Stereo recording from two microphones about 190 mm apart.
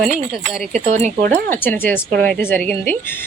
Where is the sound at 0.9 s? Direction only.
40° right (ahead or behind).